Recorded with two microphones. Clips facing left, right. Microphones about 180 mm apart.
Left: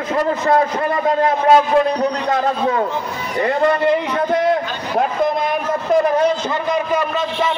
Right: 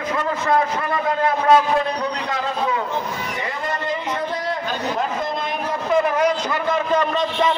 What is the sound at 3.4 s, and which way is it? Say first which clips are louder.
Speech: left 17 dB; 55° left (ahead or behind).